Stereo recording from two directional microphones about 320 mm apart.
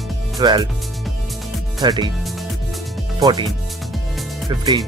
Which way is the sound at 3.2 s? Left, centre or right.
Centre.